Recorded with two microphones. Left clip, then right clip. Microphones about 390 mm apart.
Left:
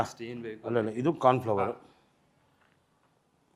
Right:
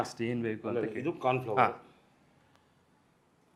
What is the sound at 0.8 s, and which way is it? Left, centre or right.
Speech, left.